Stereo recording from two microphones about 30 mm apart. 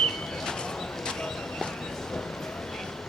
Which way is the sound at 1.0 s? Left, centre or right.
Left.